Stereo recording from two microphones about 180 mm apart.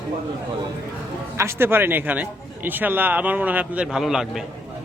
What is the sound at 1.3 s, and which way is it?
A man's voice, 15° right (ahead or behind).